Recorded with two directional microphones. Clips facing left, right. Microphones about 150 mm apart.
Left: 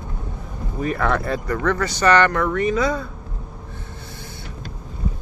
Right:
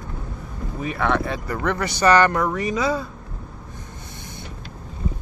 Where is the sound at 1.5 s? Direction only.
15° right (ahead or behind).